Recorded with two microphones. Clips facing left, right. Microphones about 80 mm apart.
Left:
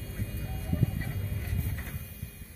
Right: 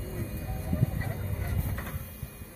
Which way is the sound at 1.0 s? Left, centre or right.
Right.